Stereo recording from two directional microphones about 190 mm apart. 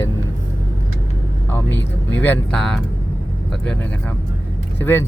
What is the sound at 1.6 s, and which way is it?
Speech, 70° left (ahead or behind).